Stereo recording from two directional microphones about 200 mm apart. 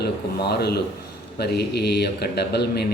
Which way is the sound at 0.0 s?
55° left (ahead or behind).